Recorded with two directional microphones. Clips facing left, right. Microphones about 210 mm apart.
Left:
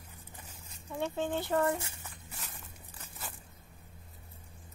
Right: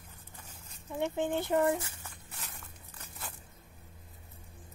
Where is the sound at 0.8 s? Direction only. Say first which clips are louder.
Right 2 dB; 15° right (ahead or behind).